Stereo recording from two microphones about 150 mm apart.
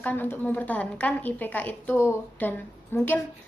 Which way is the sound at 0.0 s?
10° left (ahead or behind).